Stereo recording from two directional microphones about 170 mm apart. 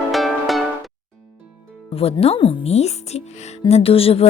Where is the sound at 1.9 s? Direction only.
35° left (ahead or behind).